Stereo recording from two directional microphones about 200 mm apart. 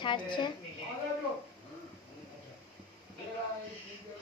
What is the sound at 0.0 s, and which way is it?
Speech, 25° left (ahead or behind).